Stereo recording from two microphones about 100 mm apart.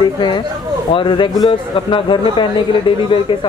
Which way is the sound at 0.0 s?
50° left (ahead or behind).